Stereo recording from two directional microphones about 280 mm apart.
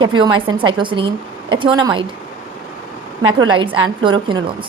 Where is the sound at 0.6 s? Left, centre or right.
Centre.